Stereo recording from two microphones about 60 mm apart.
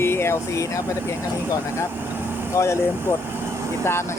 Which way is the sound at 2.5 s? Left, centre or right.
Left.